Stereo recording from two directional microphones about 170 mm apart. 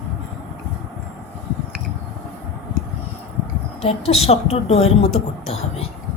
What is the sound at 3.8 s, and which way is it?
A woman's voice, 35° left (ahead or behind).